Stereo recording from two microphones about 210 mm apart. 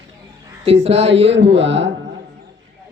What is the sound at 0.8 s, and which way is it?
Speech, 30° right (ahead or behind).